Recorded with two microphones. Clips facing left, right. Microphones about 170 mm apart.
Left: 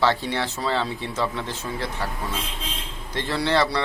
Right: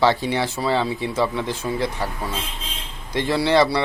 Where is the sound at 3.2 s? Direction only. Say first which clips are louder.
Right 5 dB; 10° right (ahead or behind).